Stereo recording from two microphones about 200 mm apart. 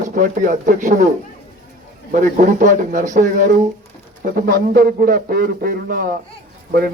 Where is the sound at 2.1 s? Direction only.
40° right (ahead or behind).